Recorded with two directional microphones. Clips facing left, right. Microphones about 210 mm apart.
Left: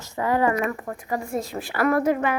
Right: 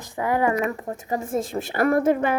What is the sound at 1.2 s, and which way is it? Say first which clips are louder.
Speech: right 3 dB; 50° right (ahead or behind).